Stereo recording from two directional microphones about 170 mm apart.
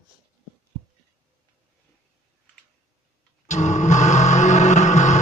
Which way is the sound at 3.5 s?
45° left (ahead or behind).